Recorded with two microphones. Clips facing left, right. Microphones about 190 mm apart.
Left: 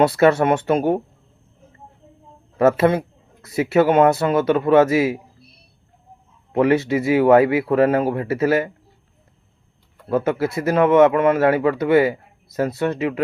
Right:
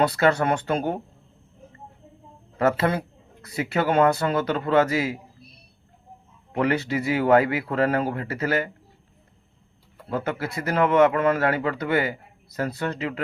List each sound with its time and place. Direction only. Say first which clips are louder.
0.0 s a man's voice: left 6 dB; 25° left (ahead or behind)
2.6 s a man's voice: left 6 dB; 25° left (ahead or behind)
6.5 s a man's voice: left 7 dB; 25° left (ahead or behind)
10.1 s a man's voice: left 8 dB; 25° left (ahead or behind)